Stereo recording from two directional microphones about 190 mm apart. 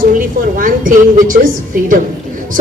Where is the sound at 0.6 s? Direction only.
45° right (ahead or behind).